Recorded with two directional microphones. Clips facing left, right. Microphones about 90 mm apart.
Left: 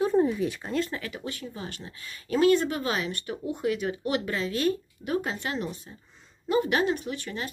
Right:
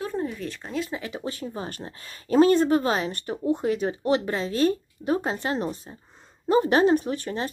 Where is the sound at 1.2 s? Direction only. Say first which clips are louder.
Right 4 dB; 35° right (ahead or behind).